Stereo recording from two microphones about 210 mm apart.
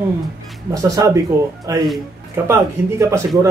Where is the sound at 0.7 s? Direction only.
15° right (ahead or behind).